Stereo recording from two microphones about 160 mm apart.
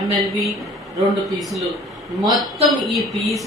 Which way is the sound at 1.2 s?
Centre (ahead or behind).